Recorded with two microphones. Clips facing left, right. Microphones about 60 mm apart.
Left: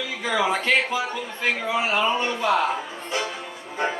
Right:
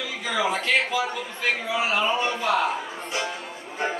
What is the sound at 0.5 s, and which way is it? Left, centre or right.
Music, left.